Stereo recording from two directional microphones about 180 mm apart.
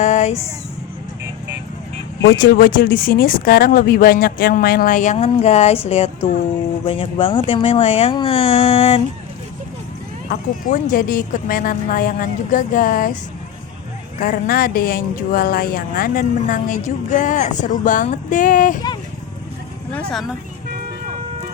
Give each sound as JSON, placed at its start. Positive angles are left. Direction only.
{"t": 0.0, "sound": "a sound", "side_deg": 40}
{"t": 2.6, "sound": "speech", "side_deg": 55}
{"t": 6.8, "sound": "speech", "side_deg": 30}
{"t": 10.2, "sound": "speech", "side_deg": 45}
{"t": 14.2, "sound": "speech", "side_deg": 55}
{"t": 19.9, "sound": "speech", "side_deg": 5}